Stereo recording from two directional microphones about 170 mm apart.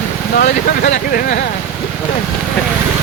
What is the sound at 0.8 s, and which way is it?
Speech, 45° left (ahead or behind).